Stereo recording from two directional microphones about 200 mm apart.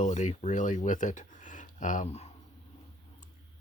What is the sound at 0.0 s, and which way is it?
Speech, 35° left (ahead or behind).